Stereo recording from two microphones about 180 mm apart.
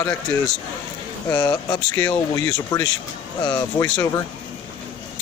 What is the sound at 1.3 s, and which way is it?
Speech, 20° left (ahead or behind).